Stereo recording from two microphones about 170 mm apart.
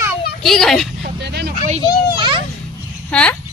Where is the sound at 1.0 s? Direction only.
75° right (ahead or behind).